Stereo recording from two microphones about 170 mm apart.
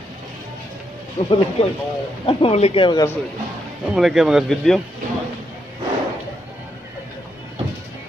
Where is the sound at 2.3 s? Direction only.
35° left (ahead or behind).